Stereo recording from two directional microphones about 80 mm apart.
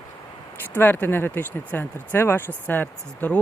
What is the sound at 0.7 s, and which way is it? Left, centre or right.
Speech, left.